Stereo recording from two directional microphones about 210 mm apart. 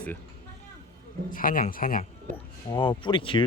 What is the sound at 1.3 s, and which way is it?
Speech, 40° left (ahead or behind).